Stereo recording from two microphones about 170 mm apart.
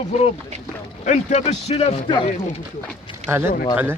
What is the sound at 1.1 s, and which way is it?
Speech, 45° left (ahead or behind).